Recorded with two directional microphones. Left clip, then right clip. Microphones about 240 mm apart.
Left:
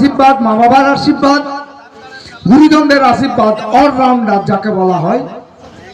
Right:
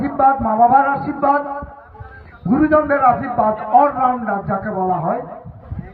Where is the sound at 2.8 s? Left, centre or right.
Right.